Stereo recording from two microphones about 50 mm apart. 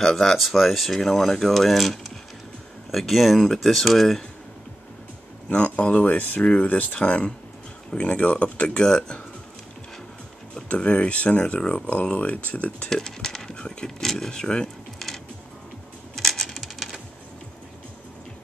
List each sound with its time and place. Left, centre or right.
0.0 s speech: centre
5.5 s speech: left
10.5 s speech: left
12.9 s speech: centre
13.6 s a sound: centre
13.9 s speech: centre
16.2 s typewriter: centre